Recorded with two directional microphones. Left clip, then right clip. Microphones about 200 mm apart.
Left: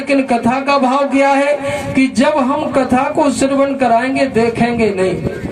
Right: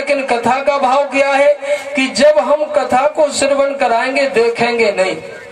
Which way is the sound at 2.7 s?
30° left (ahead or behind).